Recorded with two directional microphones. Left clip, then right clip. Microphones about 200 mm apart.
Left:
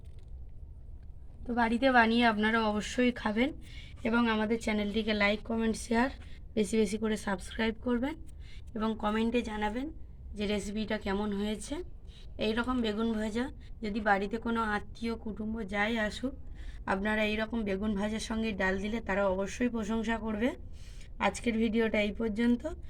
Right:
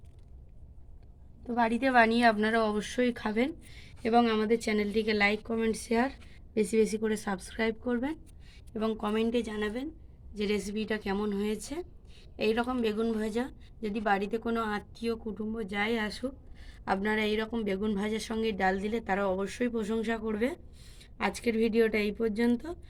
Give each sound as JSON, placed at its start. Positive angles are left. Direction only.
{"t": 1.5, "sound": "speech", "side_deg": -40}